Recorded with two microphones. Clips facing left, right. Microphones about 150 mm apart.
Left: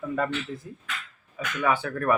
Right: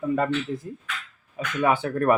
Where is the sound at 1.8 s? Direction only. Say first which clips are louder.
Right 4 dB; 30° right (ahead or behind).